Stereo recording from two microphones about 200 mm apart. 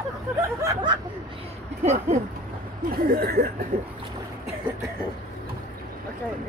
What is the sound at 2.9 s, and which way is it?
Speech, 50° right (ahead or behind).